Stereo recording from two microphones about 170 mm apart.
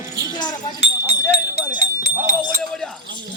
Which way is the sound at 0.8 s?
40° right (ahead or behind).